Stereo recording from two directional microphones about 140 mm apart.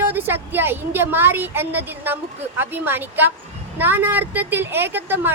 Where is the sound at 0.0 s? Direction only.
15° right (ahead or behind).